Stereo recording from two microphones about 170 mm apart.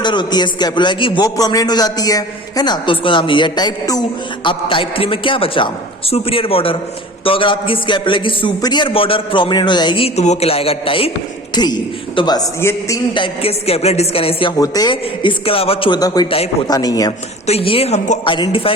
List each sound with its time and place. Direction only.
0.0 s a man's voice: 25° left (ahead or behind)
13.1 s a man's voice: 30° left (ahead or behind)
17.4 s a man's voice: 35° left (ahead or behind)